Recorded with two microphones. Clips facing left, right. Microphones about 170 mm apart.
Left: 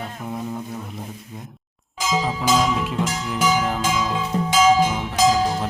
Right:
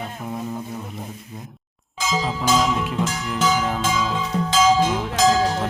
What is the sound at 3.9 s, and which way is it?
Music, 10° left (ahead or behind).